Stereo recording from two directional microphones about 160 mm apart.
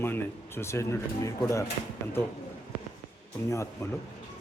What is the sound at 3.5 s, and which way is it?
Speech, 20° left (ahead or behind).